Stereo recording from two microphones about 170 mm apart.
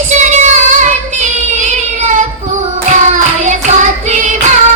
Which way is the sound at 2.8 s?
45° right (ahead or behind).